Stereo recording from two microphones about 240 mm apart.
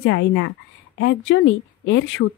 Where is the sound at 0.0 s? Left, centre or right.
Left.